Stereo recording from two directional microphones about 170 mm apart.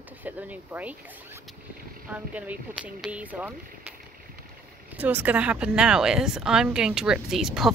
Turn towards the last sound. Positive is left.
turn(degrees=0)  # may be behind; listen again after turning